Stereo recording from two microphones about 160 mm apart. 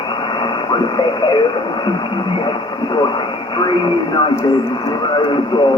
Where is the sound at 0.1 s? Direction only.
30° left (ahead or behind).